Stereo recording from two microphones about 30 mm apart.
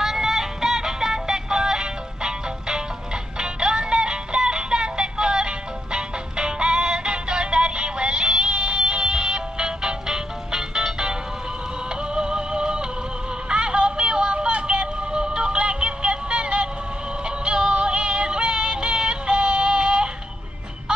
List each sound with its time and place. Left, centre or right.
0.0 s music: centre; by 20.1 s right